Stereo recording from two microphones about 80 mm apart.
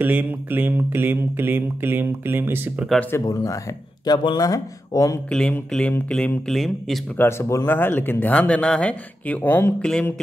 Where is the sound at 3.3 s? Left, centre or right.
Left.